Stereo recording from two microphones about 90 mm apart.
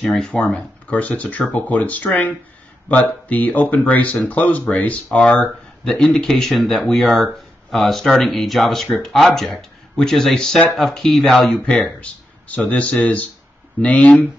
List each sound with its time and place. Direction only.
0.0 s speech: 5° left (ahead or behind)